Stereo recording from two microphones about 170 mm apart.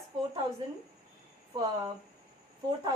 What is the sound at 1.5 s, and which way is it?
Speech, 25° right (ahead or behind).